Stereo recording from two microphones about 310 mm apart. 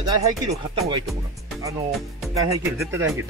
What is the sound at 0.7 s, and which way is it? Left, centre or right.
Speech, centre.